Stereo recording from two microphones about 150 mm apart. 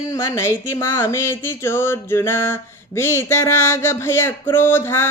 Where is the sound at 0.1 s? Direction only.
20° left (ahead or behind).